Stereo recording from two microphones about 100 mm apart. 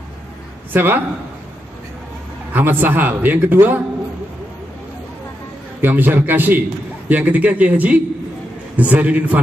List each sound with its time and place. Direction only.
0.7 s a man's voice: 20° right (ahead or behind)
2.5 s a man's voice: 20° right (ahead or behind)
5.8 s a man's voice: 20° right (ahead or behind)